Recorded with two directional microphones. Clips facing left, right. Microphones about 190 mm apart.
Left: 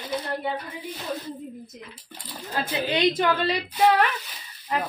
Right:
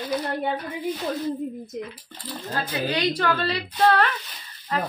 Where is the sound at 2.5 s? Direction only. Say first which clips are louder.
Left 1 dB; 20° left (ahead or behind).